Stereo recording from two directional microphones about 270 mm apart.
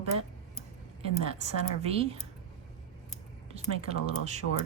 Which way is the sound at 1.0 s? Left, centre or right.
Right.